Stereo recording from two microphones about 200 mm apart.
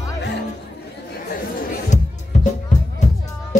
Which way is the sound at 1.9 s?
35° left (ahead or behind).